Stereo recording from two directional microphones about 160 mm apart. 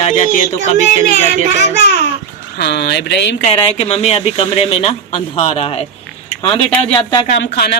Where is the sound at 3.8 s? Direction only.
40° left (ahead or behind).